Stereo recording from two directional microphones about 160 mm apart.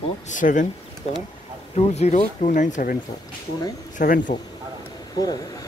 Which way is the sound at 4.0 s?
55° left (ahead or behind).